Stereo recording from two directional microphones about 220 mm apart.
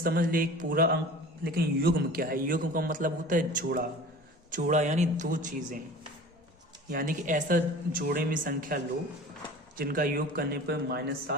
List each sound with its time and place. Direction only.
0.0 s a man's voice: 40° right (ahead or behind)
6.9 s a man's voice: 40° right (ahead or behind)